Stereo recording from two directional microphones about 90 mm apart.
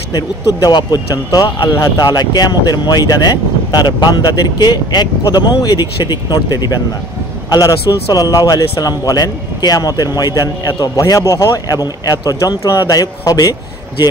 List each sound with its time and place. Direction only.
0.1 s a man's voice: 45° left (ahead or behind)